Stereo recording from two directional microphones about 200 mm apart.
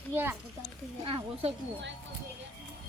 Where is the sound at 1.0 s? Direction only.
25° right (ahead or behind).